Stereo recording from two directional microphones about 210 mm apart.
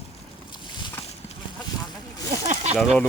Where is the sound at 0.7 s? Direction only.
20° left (ahead or behind).